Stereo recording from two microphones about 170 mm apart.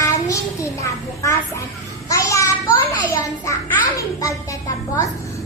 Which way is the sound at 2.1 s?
20° left (ahead or behind).